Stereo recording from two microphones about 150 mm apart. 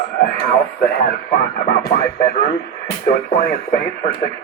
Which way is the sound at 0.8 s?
85° left.